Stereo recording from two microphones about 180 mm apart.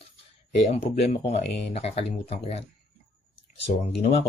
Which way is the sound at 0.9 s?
35° left (ahead or behind).